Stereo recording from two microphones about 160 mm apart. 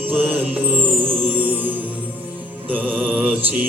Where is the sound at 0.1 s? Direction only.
10° right (ahead or behind).